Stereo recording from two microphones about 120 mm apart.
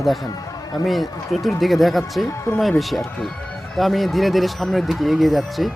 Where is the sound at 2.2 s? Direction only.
25° left (ahead or behind).